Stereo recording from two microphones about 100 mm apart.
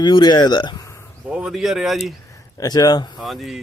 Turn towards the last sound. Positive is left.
turn(degrees=0)  # may be behind; listen again after turning